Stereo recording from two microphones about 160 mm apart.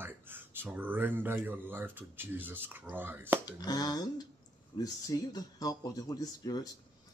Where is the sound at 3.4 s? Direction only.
25° left (ahead or behind).